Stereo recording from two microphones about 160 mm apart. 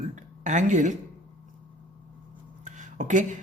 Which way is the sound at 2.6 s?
50° right (ahead or behind).